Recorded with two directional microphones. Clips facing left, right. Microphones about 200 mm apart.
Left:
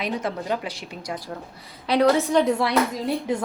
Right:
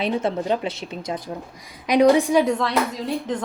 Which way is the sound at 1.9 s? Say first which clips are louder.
Right 3 dB; 15° right (ahead or behind).